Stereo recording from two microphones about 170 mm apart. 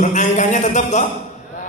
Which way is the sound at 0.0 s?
45° left (ahead or behind).